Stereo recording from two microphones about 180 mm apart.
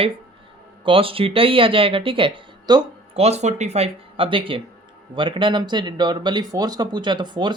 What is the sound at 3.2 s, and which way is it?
Speech, 40° right (ahead or behind).